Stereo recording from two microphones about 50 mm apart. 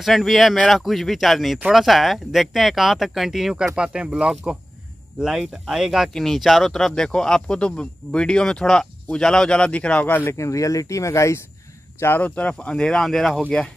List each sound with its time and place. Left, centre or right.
0.0 s speech: centre
6.1 s speech: centre; by 10.1 s left
10.3 s speech: left
12.0 s speech: left
12.4 s speech: left
13.0 s speech: centre